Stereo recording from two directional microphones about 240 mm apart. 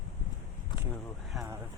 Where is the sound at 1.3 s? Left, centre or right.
Centre.